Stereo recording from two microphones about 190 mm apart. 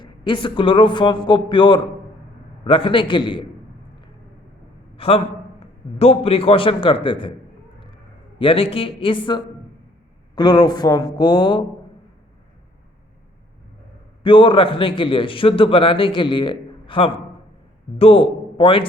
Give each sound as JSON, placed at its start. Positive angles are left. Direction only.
{"t": 0.0, "sound": "a man's voice", "side_deg": 25}
{"t": 4.9, "sound": "a man's voice", "side_deg": 30}
{"t": 8.4, "sound": "a man's voice", "side_deg": 30}
{"t": 14.3, "sound": "a man's voice", "side_deg": 25}